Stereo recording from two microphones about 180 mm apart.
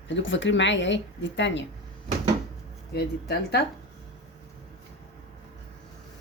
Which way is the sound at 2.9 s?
65° left (ahead or behind).